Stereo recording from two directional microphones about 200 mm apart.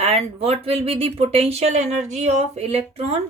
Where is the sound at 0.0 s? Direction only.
30° right (ahead or behind).